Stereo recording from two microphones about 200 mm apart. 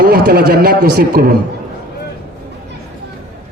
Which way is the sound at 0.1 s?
50° right (ahead or behind).